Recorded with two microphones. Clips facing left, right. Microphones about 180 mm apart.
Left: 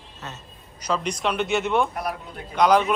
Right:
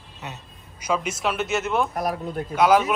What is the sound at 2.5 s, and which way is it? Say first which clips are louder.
Speech: even; 5° right (ahead or behind).